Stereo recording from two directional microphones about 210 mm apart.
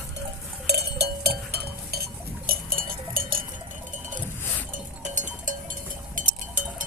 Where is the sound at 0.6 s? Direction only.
50° right (ahead or behind).